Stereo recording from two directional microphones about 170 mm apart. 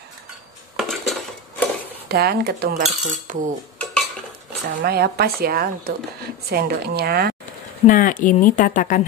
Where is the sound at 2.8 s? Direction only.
45° right (ahead or behind).